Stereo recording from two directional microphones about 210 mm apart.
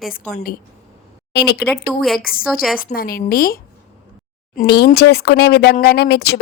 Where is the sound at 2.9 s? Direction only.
45° left (ahead or behind).